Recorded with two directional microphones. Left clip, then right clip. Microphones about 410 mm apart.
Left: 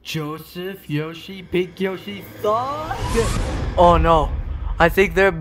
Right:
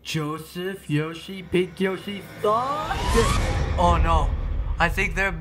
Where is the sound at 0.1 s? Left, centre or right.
Centre.